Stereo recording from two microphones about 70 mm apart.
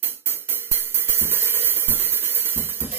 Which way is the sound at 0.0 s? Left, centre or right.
Right.